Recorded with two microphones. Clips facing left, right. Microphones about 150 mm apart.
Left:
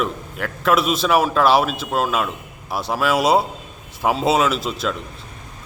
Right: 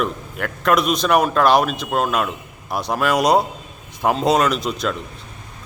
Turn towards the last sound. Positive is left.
turn(degrees=0)  # may be behind; listen again after turning